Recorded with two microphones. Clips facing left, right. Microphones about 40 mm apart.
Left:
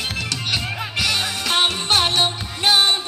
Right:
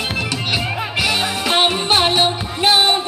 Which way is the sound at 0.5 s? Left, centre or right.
Centre.